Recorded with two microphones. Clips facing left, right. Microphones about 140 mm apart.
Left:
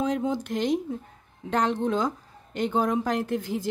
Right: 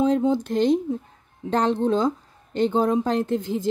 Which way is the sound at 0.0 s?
30° right (ahead or behind).